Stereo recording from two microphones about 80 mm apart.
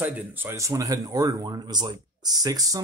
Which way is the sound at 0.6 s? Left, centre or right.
Right.